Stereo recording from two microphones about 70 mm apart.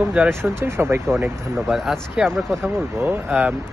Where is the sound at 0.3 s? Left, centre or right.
Right.